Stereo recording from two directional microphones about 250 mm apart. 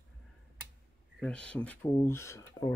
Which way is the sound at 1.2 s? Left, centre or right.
Centre.